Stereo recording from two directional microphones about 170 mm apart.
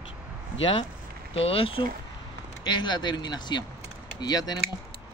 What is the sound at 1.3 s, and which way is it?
Speech, 35° left (ahead or behind).